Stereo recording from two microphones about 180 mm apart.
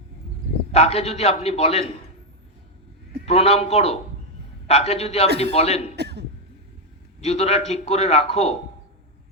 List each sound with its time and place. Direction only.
0.7 s a man's voice: 35° left (ahead or behind)
3.2 s a man's voice: 35° left (ahead or behind)
6.0 s cough: 70° right (ahead or behind)
7.2 s a man's voice: 35° left (ahead or behind)